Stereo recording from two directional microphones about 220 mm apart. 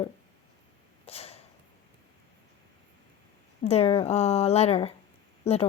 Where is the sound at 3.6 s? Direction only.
25° left (ahead or behind).